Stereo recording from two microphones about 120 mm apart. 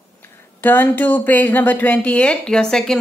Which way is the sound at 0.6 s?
15° left (ahead or behind).